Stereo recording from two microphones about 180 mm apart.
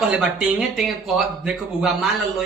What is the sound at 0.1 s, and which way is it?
Speech, 5° right (ahead or behind).